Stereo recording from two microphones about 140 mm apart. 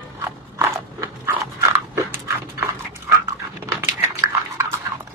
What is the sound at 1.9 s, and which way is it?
Dog, 20° right (ahead or behind).